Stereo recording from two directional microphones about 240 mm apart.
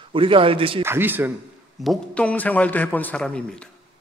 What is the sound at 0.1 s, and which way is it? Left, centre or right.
Speech, right.